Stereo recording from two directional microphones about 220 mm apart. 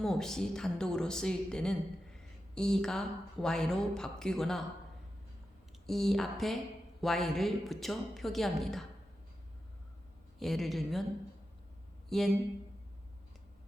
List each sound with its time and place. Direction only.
0.0 s speech: centre (ahead or behind)
5.8 s speech: centre (ahead or behind)
10.4 s speech: centre (ahead or behind)
12.0 s speech: centre (ahead or behind)